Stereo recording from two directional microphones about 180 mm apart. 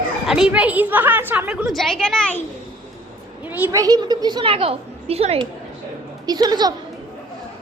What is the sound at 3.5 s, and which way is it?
A woman's voice, 15° right (ahead or behind).